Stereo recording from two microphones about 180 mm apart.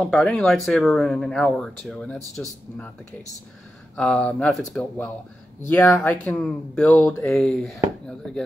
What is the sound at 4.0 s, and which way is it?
Speech, 5° left (ahead or behind).